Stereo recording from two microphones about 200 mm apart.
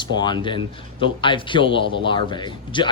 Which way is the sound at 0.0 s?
20° left (ahead or behind).